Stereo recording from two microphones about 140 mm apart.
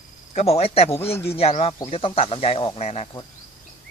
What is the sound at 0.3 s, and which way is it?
Speech, 45° left (ahead or behind).